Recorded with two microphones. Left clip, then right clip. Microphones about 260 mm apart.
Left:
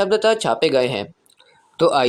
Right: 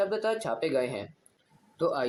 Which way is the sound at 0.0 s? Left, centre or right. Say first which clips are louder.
Left 12 dB; left.